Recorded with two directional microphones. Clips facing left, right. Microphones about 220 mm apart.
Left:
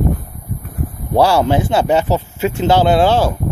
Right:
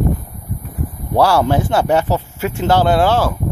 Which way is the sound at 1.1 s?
15° left (ahead or behind).